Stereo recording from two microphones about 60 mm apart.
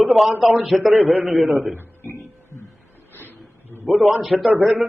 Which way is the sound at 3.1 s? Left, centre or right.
Left.